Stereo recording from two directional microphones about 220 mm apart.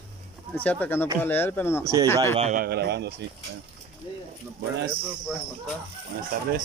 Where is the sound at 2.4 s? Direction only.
35° right (ahead or behind).